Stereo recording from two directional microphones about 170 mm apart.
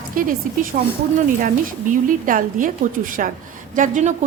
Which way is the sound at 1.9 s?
50° right (ahead or behind).